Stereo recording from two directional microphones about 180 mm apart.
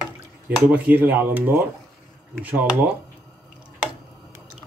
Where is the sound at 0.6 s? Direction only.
10° right (ahead or behind).